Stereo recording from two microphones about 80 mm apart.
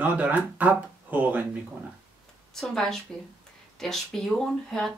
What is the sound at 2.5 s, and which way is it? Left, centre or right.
Speech, centre.